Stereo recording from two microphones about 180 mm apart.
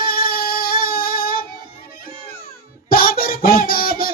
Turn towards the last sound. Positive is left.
turn(degrees=55)  # may be behind; listen again after turning